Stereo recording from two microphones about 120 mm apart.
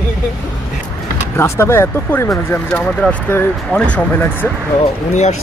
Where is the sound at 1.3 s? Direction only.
20° left (ahead or behind).